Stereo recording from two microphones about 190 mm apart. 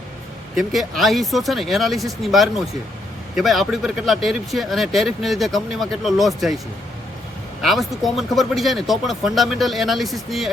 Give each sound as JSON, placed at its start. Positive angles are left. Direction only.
{"t": 0.5, "sound": "speech", "side_deg": 0}
{"t": 7.6, "sound": "speech", "side_deg": 0}